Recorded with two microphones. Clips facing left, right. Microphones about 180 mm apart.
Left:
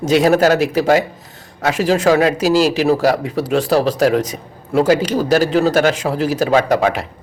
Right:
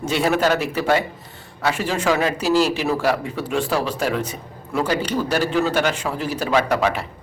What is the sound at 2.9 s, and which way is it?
Speech, 40° left (ahead or behind).